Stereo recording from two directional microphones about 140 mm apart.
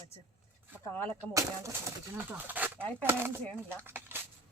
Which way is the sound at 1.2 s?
25° right (ahead or behind).